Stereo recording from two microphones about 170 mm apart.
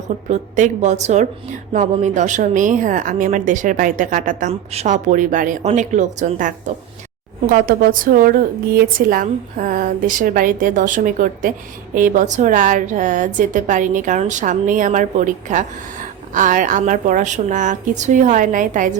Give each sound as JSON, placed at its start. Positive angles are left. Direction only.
{"t": 0.3, "sound": "a woman's voice", "side_deg": -45}
{"t": 7.5, "sound": "a woman's voice", "side_deg": -55}